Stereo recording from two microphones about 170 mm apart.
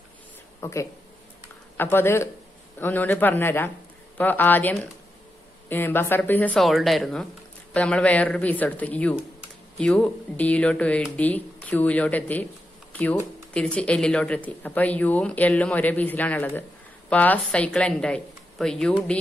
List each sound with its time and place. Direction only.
0.6 s a woman's voice: 15° left (ahead or behind)